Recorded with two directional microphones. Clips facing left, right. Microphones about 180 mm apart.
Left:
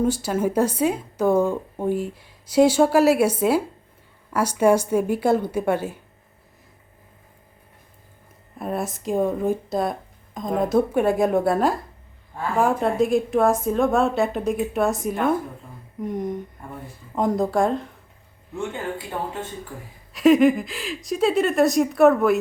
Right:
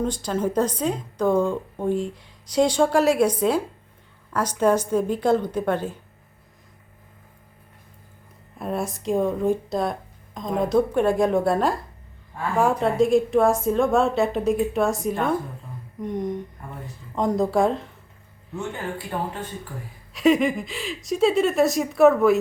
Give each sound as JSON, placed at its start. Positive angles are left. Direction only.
{"t": 0.0, "sound": "a woman's voice", "side_deg": 10}
{"t": 8.5, "sound": "speech", "side_deg": 0}
{"t": 18.7, "sound": "speech", "side_deg": 25}
{"t": 20.1, "sound": "speech", "side_deg": 0}